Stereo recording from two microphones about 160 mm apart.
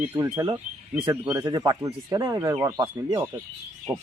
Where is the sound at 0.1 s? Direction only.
15° right (ahead or behind).